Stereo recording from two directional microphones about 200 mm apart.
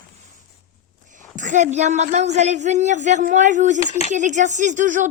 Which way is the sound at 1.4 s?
40° right (ahead or behind).